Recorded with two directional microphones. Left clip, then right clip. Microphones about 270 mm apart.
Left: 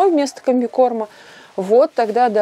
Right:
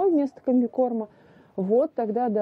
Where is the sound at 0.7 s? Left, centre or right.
Left.